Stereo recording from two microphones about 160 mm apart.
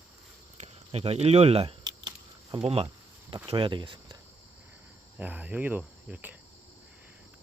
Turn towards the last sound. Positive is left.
turn(degrees=-5)  # may be behind; listen again after turning